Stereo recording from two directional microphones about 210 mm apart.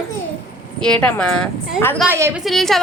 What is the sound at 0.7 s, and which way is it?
Speech, 5° left (ahead or behind).